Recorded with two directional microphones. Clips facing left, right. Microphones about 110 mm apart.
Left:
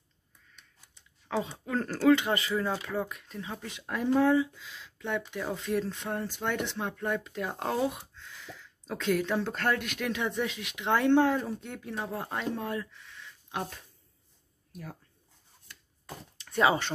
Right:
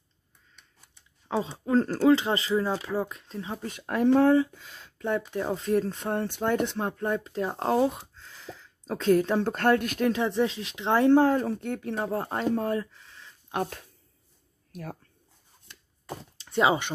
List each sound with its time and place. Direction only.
1.3 s speech: 25° right (ahead or behind)
3.6 s speech: 50° right (ahead or behind)
11.4 s speech: 55° right (ahead or behind)
11.9 s speech: 40° right (ahead or behind)
14.7 s speech: 60° right (ahead or behind)
16.3 s speech: 25° right (ahead or behind)